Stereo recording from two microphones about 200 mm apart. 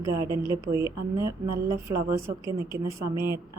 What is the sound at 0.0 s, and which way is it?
Speech, 15° right (ahead or behind).